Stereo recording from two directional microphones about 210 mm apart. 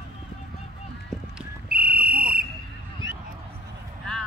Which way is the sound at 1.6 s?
45° right (ahead or behind).